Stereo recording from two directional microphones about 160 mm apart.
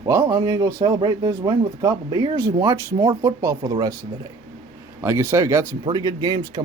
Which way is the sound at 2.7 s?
15° right (ahead or behind).